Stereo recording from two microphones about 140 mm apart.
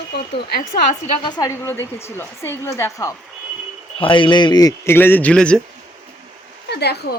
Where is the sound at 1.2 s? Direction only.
25° left (ahead or behind).